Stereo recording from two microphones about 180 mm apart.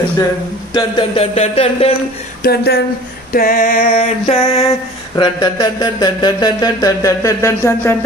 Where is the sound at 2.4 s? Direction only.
60° left (ahead or behind).